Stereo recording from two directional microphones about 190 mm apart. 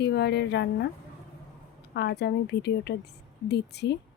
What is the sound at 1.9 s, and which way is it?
A woman's voice, 60° left (ahead or behind).